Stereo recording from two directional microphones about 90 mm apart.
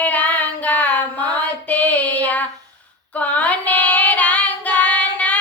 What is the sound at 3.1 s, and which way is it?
Child singing, 15° left (ahead or behind).